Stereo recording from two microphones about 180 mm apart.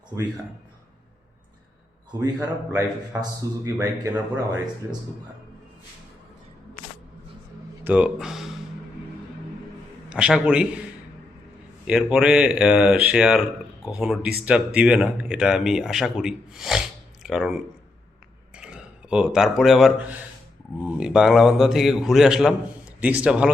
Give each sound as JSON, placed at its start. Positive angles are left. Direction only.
{"t": 2.7, "sound": "a man's voice", "side_deg": -15}
{"t": 7.9, "sound": "speech", "side_deg": -5}
{"t": 10.1, "sound": "a man's voice", "side_deg": -5}
{"t": 11.9, "sound": "a man's voice", "side_deg": -5}